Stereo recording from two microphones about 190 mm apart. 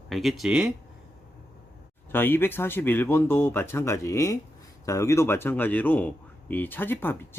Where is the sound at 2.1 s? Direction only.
10° left (ahead or behind).